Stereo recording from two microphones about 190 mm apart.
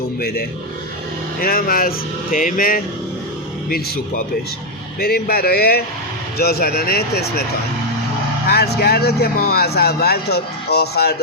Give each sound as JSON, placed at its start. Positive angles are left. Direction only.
{"t": 0.2, "sound": "speech", "side_deg": 55}
{"t": 8.4, "sound": "speech", "side_deg": 60}